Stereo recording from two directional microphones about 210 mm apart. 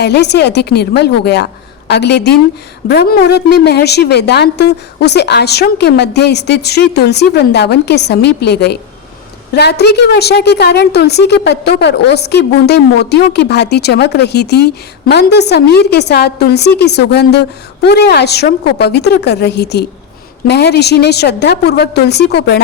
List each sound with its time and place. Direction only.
0.0 s a woman's voice: 55° left (ahead or behind)